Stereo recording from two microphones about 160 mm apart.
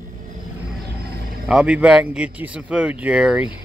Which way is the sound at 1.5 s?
5° right (ahead or behind).